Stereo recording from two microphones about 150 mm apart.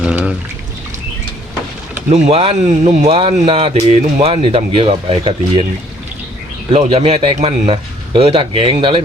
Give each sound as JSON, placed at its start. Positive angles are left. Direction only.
{"t": 0.0, "sound": "pour", "side_deg": -10}
{"t": 2.0, "sound": "speech", "side_deg": -45}
{"t": 6.7, "sound": "speech", "side_deg": -40}